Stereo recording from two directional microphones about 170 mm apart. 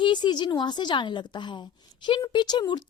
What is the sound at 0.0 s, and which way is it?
A woman's voice, 25° left (ahead or behind).